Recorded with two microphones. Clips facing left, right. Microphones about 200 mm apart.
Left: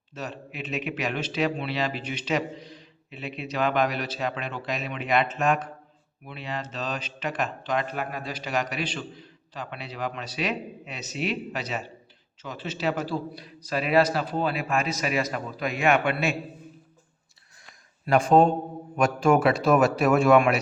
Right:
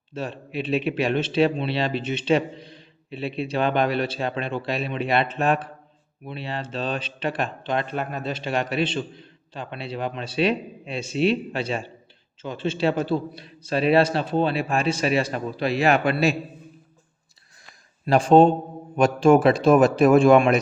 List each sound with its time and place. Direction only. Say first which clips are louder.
0.1 s speech: right 5 dB; 30° right (ahead or behind)
18.0 s a man's voice: right 4 dB; 30° right (ahead or behind)